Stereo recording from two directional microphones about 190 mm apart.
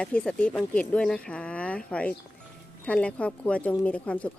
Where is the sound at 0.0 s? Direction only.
5° left (ahead or behind).